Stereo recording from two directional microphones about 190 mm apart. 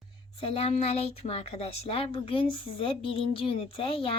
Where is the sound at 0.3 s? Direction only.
30° left (ahead or behind).